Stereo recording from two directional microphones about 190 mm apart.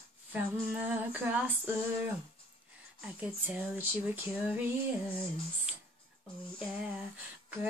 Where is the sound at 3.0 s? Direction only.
5° right (ahead or behind).